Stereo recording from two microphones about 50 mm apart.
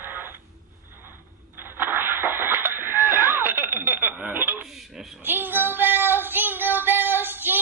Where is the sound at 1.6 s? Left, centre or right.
Right.